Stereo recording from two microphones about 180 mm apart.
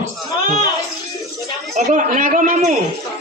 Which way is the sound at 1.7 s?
45° right (ahead or behind).